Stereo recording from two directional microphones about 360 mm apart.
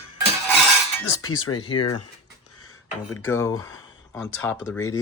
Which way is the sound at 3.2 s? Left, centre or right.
Centre.